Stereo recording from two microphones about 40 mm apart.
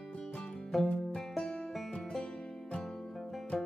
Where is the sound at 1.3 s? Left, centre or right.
Centre.